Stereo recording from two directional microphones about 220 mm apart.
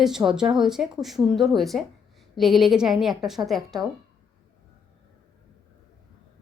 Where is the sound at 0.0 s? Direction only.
Centre (ahead or behind).